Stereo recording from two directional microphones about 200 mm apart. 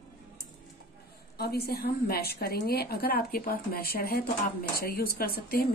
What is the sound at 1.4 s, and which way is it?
Speech, 50° left (ahead or behind).